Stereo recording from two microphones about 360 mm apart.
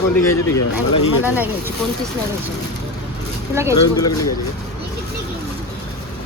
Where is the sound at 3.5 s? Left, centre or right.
Centre.